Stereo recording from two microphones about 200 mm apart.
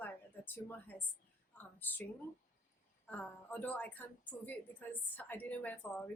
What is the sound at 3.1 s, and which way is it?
A woman's voice, 10° left (ahead or behind).